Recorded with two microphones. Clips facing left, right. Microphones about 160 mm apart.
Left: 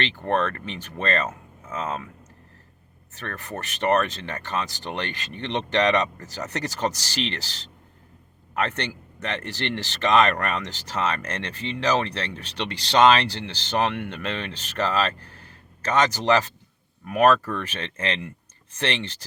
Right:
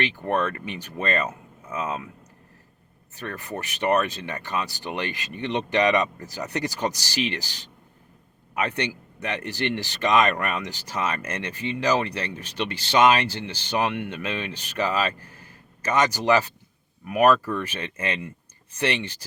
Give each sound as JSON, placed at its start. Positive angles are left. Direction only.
{"t": 0.0, "sound": "speech", "side_deg": -10}
{"t": 3.2, "sound": "speech", "side_deg": -10}
{"t": 8.5, "sound": "speech", "side_deg": -10}
{"t": 12.4, "sound": "speech", "side_deg": 70}
{"t": 13.7, "sound": "speech", "side_deg": -10}
{"t": 15.2, "sound": "a sound", "side_deg": 70}
{"t": 15.8, "sound": "speech", "side_deg": -10}